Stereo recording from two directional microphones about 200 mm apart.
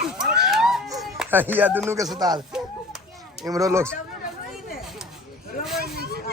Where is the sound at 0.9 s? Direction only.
5° right (ahead or behind).